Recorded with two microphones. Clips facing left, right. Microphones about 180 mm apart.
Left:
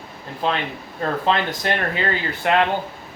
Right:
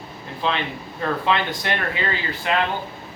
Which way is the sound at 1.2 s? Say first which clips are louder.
Left 3 dB; 40° left (ahead or behind).